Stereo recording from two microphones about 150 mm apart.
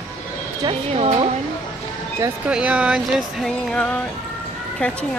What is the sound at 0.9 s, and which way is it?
Speech, 40° right (ahead or behind).